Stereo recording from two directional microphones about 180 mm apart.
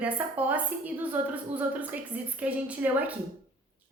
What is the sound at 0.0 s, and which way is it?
A woman's voice, 10° right (ahead or behind).